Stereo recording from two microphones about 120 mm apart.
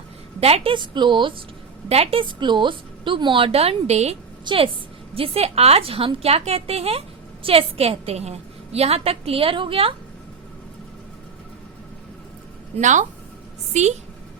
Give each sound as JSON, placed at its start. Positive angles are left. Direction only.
{"t": 0.3, "sound": "a woman's voice", "side_deg": -55}
{"t": 1.9, "sound": "a woman's voice", "side_deg": -55}
{"t": 4.4, "sound": "a woman's voice", "side_deg": -50}
{"t": 12.7, "sound": "speech", "side_deg": -90}
{"t": 13.7, "sound": "a woman's voice", "side_deg": -75}